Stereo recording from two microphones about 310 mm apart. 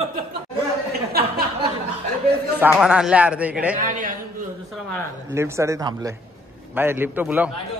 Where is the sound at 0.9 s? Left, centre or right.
Right.